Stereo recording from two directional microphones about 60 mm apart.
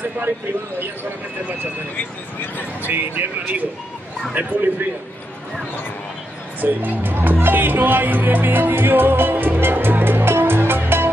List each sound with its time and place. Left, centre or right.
2.8 s a man's voice: right
6.6 s speech: right